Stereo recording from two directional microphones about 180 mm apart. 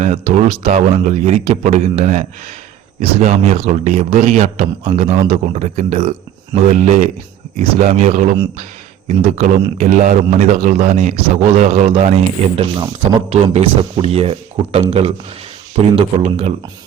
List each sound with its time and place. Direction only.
0.0 s a man's voice: 35° right (ahead or behind)